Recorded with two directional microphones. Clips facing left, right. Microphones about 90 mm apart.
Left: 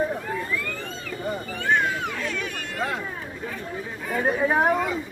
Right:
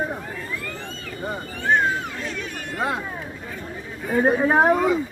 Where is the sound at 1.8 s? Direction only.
30° right (ahead or behind).